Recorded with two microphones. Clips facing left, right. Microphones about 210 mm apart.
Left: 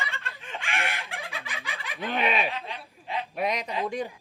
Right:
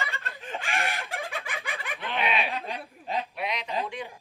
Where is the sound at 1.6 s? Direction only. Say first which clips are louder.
Right 3 dB; 50° right (ahead or behind).